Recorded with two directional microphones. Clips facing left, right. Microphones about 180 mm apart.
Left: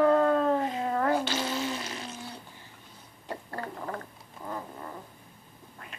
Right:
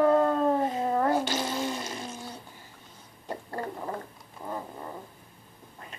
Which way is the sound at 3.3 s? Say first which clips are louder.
Right 3 dB; 15° right (ahead or behind).